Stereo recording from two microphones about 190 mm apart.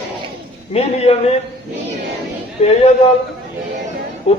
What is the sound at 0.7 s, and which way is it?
Speech, 35° left (ahead or behind).